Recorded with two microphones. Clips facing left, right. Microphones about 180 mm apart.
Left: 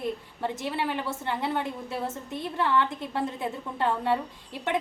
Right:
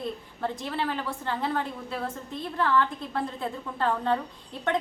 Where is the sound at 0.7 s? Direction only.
15° left (ahead or behind).